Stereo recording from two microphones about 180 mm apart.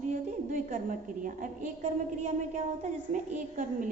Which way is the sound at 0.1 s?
45° right (ahead or behind).